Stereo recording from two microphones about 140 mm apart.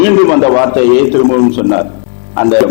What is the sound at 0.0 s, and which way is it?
A man's voice, 15° left (ahead or behind).